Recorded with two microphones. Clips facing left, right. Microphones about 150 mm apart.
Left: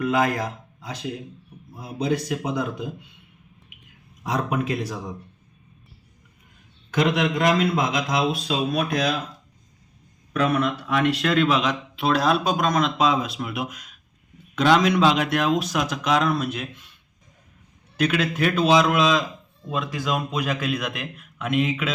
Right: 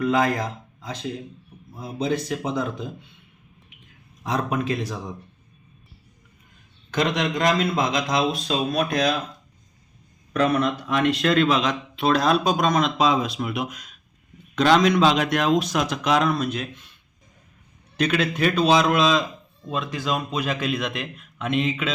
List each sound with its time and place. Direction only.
0.0 s a man's voice: 5° left (ahead or behind)
4.2 s a man's voice: 5° left (ahead or behind)
6.9 s speech: 5° left (ahead or behind)
10.3 s speech: 5° left (ahead or behind)
17.9 s speech: 5° left (ahead or behind)